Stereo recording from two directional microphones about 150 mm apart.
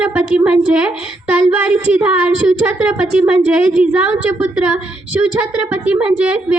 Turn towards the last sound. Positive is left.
turn(degrees=-10)  # may be behind; listen again after turning